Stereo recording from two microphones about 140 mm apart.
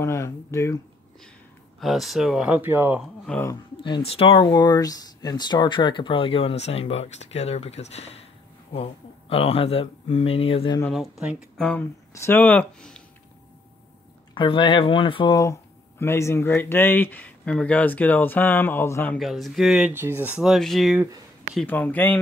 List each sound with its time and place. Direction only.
0.0 s speech: 20° left (ahead or behind)
1.8 s speech: centre (ahead or behind)
3.4 s speech: 35° left (ahead or behind)
10.9 s speech: centre (ahead or behind)
11.5 s speech: 5° left (ahead or behind)
12.1 s speech: 20° left (ahead or behind)
14.3 s speech: 35° left (ahead or behind)
15.3 s speech: 20° left (ahead or behind)
19.1 s speech: centre (ahead or behind)
19.9 s speech: 15° right (ahead or behind); by 21.0 s centre (ahead or behind)
21.6 s speech: 15° left (ahead or behind)